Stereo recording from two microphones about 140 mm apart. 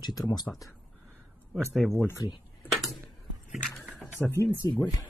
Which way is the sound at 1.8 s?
Centre (ahead or behind).